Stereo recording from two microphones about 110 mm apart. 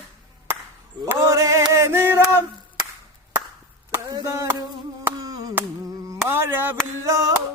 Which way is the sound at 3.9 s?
30° right (ahead or behind).